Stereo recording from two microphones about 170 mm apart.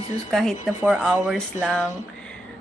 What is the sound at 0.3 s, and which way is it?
Speech, 5° left (ahead or behind).